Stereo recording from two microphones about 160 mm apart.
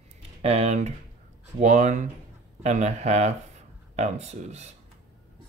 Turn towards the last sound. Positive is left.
turn(degrees=-45)  # may be behind; listen again after turning